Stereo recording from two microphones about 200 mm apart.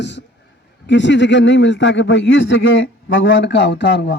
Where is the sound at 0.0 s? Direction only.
60° left (ahead or behind).